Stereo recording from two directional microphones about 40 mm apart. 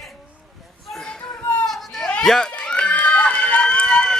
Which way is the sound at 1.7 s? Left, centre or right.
Centre.